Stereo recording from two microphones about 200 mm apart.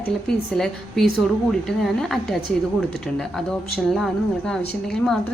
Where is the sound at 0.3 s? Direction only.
Centre (ahead or behind).